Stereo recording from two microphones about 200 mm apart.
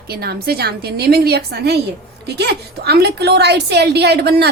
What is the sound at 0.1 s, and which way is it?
A woman's voice, 50° right (ahead or behind).